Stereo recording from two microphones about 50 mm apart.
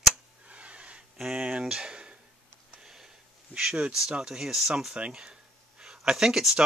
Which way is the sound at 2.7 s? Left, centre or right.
Centre.